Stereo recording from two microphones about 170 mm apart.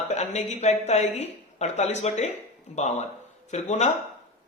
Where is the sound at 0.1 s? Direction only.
40° left (ahead or behind).